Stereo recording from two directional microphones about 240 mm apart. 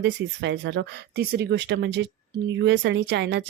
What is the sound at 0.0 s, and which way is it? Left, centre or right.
Speech, right.